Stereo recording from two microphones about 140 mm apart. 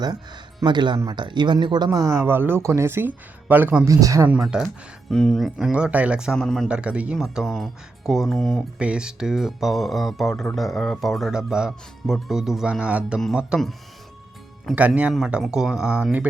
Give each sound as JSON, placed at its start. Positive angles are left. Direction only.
{"t": 0.6, "sound": "speech", "side_deg": -30}
{"t": 4.3, "sound": "speech", "side_deg": -5}
{"t": 6.7, "sound": "speech", "side_deg": -10}
{"t": 14.8, "sound": "speech", "side_deg": -10}